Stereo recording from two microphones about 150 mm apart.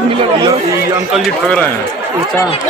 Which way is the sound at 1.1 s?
10° left (ahead or behind).